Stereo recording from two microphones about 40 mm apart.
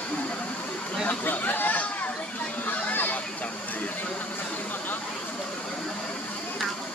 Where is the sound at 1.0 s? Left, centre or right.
Left.